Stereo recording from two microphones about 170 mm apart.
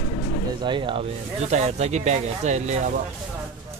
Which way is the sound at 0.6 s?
30° right (ahead or behind).